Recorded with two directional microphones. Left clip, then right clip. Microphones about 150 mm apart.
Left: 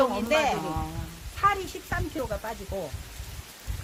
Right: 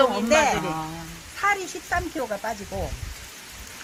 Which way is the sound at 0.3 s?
15° left (ahead or behind).